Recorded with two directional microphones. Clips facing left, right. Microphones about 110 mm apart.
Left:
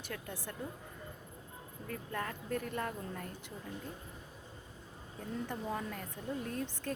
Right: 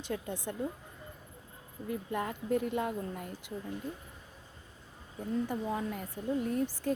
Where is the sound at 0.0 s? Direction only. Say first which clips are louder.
Right 7 dB; 20° right (ahead or behind).